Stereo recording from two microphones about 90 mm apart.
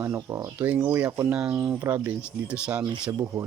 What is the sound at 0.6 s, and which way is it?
Speech, 20° right (ahead or behind).